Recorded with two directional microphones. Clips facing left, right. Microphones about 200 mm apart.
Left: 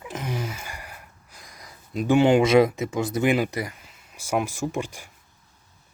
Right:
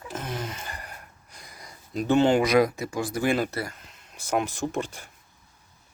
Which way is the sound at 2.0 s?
10° left (ahead or behind).